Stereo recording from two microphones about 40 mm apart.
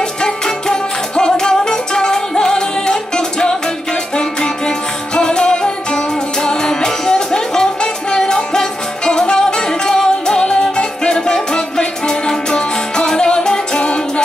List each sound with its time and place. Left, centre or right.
0.2 s music: centre